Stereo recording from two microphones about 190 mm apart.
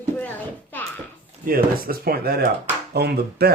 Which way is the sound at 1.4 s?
50° right (ahead or behind).